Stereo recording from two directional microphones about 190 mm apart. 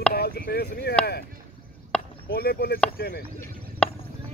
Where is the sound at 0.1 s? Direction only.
55° left (ahead or behind).